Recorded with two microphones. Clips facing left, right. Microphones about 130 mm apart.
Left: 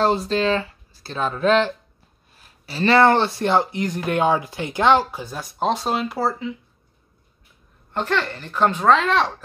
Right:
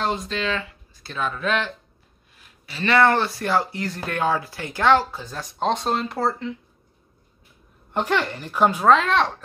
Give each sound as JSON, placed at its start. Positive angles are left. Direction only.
{"t": 0.0, "sound": "speech", "side_deg": 35}
{"t": 7.9, "sound": "speech", "side_deg": -15}